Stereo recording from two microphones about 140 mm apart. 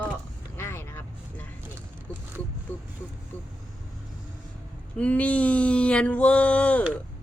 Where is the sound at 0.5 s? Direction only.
15° left (ahead or behind).